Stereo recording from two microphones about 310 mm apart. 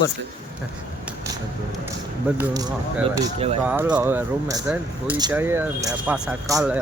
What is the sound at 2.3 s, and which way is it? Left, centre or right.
Speech, centre.